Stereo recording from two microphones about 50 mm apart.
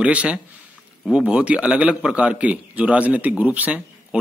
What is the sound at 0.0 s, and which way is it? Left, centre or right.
A man's voice, right.